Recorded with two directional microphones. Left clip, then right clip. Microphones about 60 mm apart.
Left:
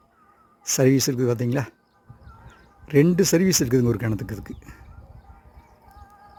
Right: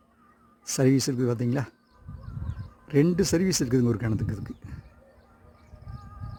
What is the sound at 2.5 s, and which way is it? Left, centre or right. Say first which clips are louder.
Crow: left 5 dB; centre.